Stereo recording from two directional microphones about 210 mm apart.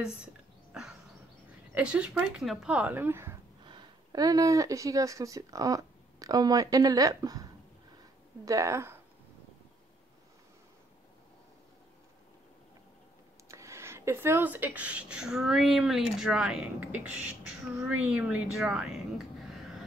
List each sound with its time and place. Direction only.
1.7 s speech: 5° right (ahead or behind)
8.5 s speech: 15° right (ahead or behind)
13.5 s speech: 15° right (ahead or behind)